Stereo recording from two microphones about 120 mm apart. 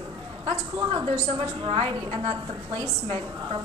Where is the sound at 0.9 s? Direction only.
40° right (ahead or behind).